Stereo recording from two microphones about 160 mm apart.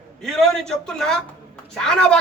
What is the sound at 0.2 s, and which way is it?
A man's voice, centre (ahead or behind).